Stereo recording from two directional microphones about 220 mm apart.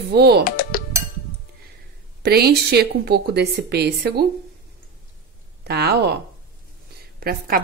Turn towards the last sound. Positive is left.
turn(degrees=-40)  # may be behind; listen again after turning